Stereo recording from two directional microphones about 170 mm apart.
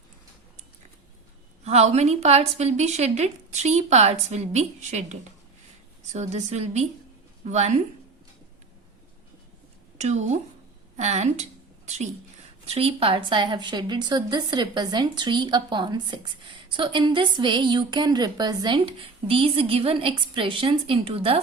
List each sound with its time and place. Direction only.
1.6 s a woman's voice: 40° right (ahead or behind)
10.0 s a woman's voice: 40° right (ahead or behind)